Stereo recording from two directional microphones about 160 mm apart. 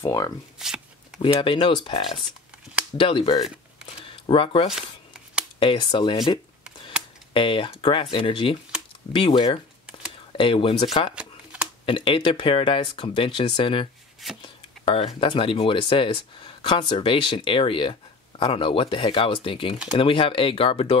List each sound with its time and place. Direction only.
0.0 s speech: 20° left (ahead or behind)
0.6 s a sound: 5° right (ahead or behind)
1.4 s speech: 30° left (ahead or behind)
3.1 s speech: 30° left (ahead or behind)